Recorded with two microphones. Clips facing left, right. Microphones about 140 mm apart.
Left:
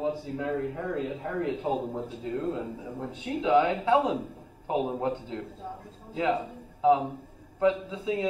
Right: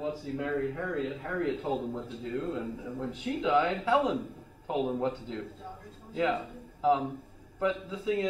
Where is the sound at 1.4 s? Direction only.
15° left (ahead or behind).